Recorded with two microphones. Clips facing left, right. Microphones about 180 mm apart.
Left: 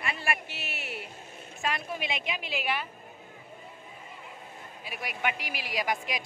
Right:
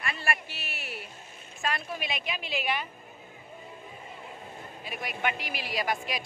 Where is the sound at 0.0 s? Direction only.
15° left (ahead or behind).